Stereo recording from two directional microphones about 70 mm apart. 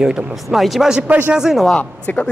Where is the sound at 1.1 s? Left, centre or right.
Right.